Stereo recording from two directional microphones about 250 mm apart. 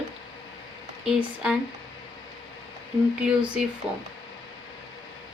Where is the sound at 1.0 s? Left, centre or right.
Centre.